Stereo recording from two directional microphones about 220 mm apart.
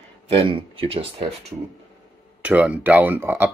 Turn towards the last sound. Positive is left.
turn(degrees=-10)  # may be behind; listen again after turning